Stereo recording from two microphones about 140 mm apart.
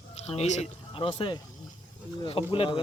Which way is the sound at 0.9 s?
35° left (ahead or behind).